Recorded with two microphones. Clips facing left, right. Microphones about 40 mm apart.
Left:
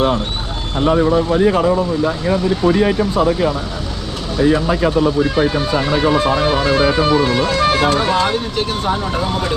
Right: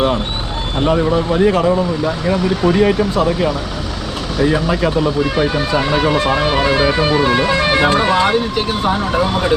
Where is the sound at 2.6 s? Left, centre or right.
Right.